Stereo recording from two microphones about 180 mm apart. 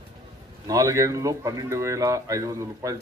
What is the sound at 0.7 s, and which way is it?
Speech, 20° right (ahead or behind).